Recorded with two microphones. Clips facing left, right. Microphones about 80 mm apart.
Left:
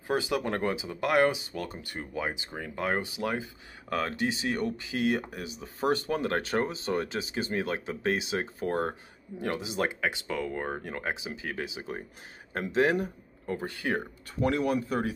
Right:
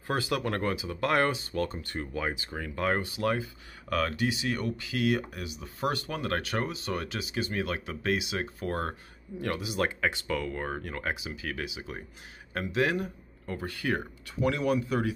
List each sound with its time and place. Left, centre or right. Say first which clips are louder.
0.0 s speech: left 1 dB; centre; by 12.0 s left
13.5 s speech: left 1 dB; left
14.4 s speech: even; left